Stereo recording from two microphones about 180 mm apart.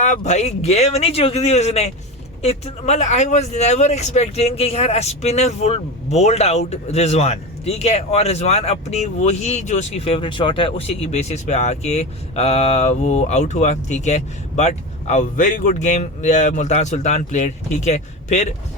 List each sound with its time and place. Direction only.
0.0 s speech: 40° left (ahead or behind)